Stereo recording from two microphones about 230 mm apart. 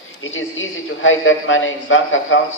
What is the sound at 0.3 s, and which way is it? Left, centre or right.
A man's voice, left.